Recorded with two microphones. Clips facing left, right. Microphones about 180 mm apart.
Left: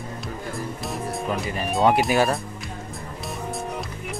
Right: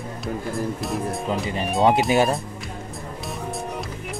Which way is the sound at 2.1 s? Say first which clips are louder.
Right 1 dB; 20° right (ahead or behind).